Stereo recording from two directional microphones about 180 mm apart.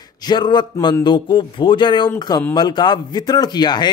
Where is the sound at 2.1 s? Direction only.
10° left (ahead or behind).